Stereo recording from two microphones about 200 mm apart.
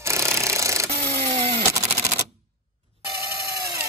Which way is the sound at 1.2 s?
30° right (ahead or behind).